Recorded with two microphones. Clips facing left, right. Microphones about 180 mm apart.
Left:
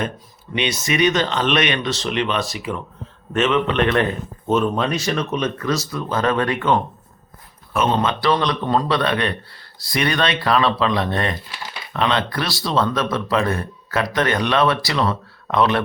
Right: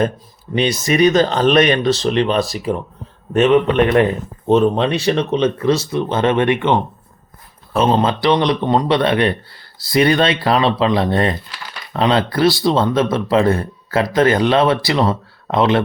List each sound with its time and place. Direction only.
0.5 s speech: 35° right (ahead or behind)
3.8 s speech: 20° right (ahead or behind)
4.4 s speech: 35° right (ahead or behind)